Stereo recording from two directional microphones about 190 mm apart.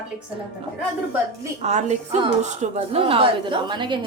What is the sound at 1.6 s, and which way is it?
A woman's voice, 35° right (ahead or behind).